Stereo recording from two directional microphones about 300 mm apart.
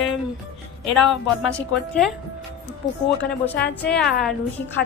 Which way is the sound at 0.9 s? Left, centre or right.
Centre.